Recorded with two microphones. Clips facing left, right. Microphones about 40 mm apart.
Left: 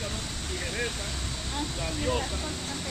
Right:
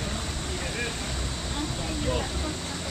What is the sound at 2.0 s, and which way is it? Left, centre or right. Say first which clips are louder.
Speech: left 1 dB; centre.